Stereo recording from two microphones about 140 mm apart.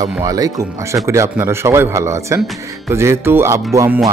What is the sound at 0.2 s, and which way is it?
Speech, 25° right (ahead or behind).